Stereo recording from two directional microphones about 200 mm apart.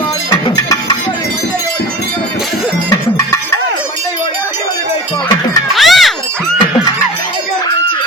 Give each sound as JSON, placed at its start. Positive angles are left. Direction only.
{"t": 0.3, "sound": "music", "side_deg": 20}
{"t": 2.9, "sound": "music", "side_deg": 15}
{"t": 5.7, "sound": "a sound", "side_deg": 0}